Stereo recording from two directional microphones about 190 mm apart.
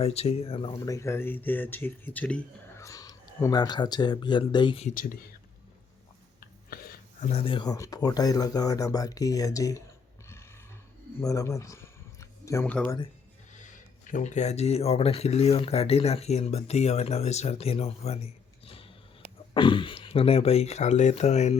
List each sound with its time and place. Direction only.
0.0 s speech: 35° left (ahead or behind)
0.9 s speech: 15° left (ahead or behind)
7.2 s speech: 35° left (ahead or behind); by 9.8 s 15° left (ahead or behind)
11.2 s speech: 15° left (ahead or behind)
14.1 s speech: 40° left (ahead or behind)
18.6 s a sound: 30° left (ahead or behind)
19.5 s speech: 25° left (ahead or behind)